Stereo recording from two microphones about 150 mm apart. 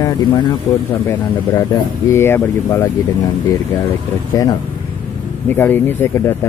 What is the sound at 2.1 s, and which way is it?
Speech, 15° left (ahead or behind).